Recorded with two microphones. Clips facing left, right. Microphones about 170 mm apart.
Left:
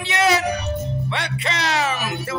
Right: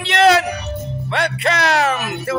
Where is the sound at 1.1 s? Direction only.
55° right (ahead or behind).